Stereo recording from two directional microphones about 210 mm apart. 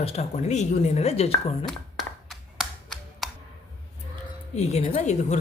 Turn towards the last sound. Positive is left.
turn(degrees=30)  # may be behind; listen again after turning